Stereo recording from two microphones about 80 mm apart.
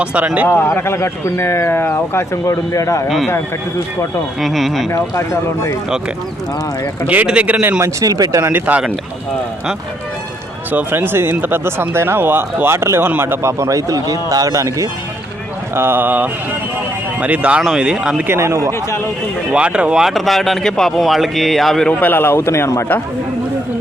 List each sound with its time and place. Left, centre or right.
0.0 s speech: centre
0.5 s speech: left
4.4 s speech: centre
4.9 s speech: left
7.1 s speech: centre
8.0 s speech: right
8.4 s speech: right
10.7 s speech: right
15.7 s speech: right; by 18.3 s centre
18.3 s speech: right
18.7 s speech: left
19.5 s speech: centre
21.8 s speech: left